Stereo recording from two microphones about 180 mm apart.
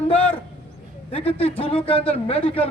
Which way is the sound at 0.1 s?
10° left (ahead or behind).